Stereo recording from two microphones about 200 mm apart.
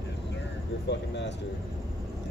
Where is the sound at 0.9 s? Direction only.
60° left (ahead or behind).